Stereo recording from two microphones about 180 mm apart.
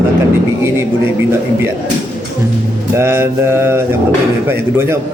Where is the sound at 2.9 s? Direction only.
15° right (ahead or behind).